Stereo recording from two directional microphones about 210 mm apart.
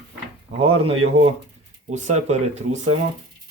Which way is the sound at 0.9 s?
25° right (ahead or behind).